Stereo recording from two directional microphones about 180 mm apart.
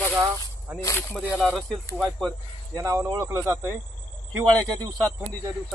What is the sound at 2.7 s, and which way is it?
Speech, 15° right (ahead or behind).